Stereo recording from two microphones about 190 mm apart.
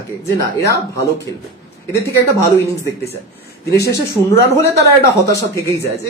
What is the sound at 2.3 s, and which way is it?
Speech, 10° left (ahead or behind).